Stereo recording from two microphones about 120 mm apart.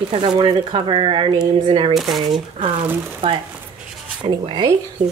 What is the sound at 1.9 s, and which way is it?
Speech, centre (ahead or behind).